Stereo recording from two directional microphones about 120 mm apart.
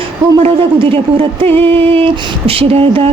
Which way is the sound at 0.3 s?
50° right (ahead or behind).